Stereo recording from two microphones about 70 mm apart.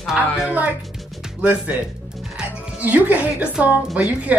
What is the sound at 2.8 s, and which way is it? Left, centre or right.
Speech, right.